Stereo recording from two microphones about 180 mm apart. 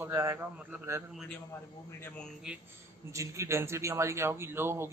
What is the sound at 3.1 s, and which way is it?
A man's voice, 15° right (ahead or behind).